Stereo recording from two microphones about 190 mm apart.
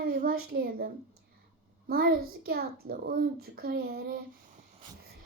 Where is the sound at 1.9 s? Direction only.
50° right (ahead or behind).